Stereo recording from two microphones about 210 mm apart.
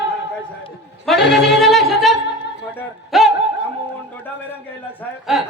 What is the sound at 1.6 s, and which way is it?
Music, centre (ahead or behind).